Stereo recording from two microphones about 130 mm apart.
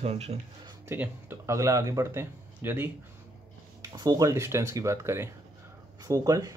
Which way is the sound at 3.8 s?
30° right (ahead or behind).